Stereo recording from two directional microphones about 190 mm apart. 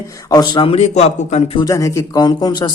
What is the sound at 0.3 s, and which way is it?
A man's voice, 20° left (ahead or behind).